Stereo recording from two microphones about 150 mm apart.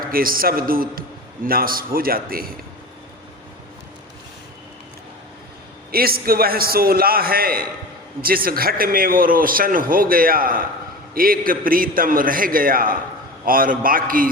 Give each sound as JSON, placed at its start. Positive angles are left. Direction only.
{"t": 0.1, "sound": "a man's voice", "side_deg": -75}
{"t": 5.9, "sound": "a man's voice", "side_deg": -90}